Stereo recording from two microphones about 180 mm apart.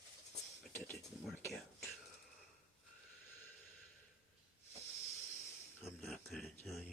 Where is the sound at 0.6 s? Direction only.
Centre (ahead or behind).